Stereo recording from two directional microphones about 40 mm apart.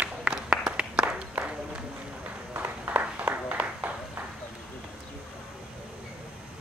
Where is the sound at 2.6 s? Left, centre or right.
Right.